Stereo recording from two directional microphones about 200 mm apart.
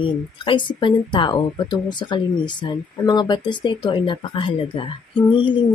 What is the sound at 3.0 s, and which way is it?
Speech, 20° left (ahead or behind).